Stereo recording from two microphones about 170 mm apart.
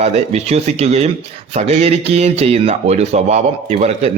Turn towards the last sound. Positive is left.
turn(degrees=-40)  # may be behind; listen again after turning